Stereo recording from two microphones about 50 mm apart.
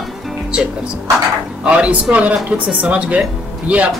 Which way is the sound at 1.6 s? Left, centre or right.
Right.